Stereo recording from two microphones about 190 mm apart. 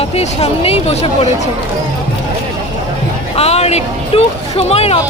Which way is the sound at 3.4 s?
35° left (ahead or behind).